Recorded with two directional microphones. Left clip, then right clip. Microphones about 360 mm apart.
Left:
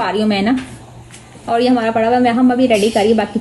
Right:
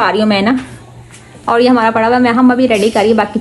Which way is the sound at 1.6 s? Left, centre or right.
Centre.